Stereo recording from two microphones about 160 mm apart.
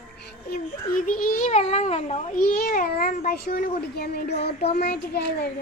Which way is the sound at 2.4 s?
65° left (ahead or behind).